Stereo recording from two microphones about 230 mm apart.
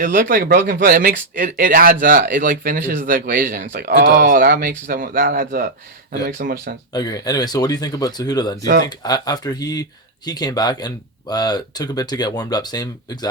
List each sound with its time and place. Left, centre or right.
0.0 s a man's voice: right
3.6 s a man's voice: right
6.9 s speech: centre